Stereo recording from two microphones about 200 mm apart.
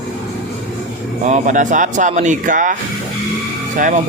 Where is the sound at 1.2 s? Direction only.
35° right (ahead or behind).